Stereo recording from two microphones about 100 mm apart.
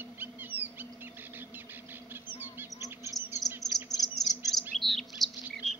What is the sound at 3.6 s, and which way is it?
Chirp, centre (ahead or behind).